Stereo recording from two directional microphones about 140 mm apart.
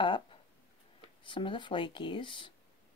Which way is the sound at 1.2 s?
35° left (ahead or behind).